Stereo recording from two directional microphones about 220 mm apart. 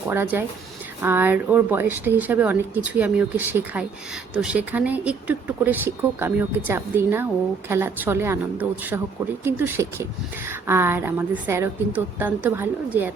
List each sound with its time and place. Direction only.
0.1 s speech: 10° right (ahead or behind)